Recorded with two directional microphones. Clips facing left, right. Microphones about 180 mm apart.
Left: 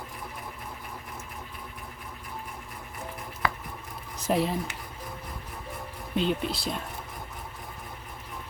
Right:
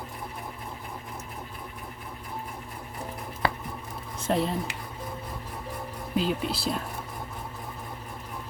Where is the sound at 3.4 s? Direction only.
30° right (ahead or behind).